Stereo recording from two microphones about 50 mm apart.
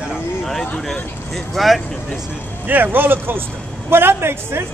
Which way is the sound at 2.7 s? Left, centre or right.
Right.